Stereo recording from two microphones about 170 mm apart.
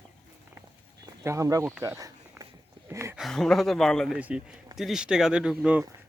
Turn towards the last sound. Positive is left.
turn(degrees=-5)  # may be behind; listen again after turning